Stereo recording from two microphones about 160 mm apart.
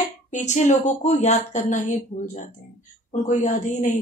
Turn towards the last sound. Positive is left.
turn(degrees=50)  # may be behind; listen again after turning